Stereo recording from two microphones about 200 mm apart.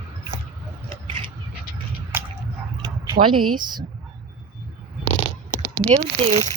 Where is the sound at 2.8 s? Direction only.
20° right (ahead or behind).